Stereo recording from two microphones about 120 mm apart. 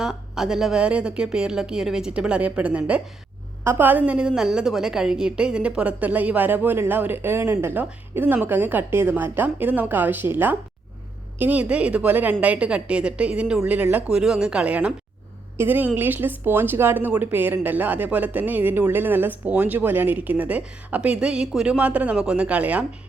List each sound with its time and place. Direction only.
0.0 s a woman's voice: 5° right (ahead or behind)